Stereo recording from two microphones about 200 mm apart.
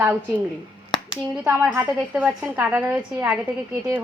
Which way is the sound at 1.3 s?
5° right (ahead or behind).